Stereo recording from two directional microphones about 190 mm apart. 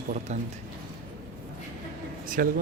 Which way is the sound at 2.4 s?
50° right (ahead or behind).